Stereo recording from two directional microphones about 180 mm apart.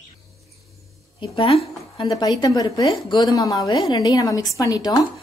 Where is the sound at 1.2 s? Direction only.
30° left (ahead or behind).